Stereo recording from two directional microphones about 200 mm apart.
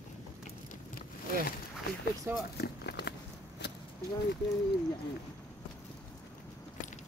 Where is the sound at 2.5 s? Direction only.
55° left (ahead or behind).